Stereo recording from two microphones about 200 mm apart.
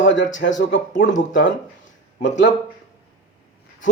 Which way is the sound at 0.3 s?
65° left (ahead or behind).